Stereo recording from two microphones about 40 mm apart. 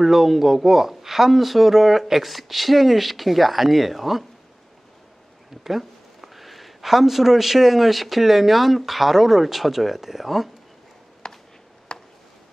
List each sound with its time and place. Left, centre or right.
0.0 s speech: centre
5.6 s speech: centre
11.2 s a sound: centre